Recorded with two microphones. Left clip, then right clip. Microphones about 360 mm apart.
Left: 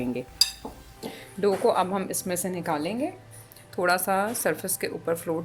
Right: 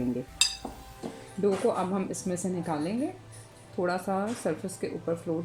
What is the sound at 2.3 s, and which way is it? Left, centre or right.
Speech, left.